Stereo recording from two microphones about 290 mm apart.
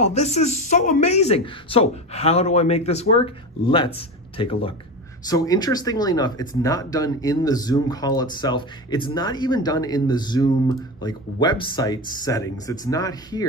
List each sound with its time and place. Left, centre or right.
0.0 s speech: left